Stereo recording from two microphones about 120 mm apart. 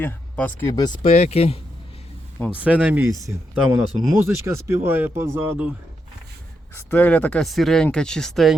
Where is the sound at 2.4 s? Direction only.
10° right (ahead or behind).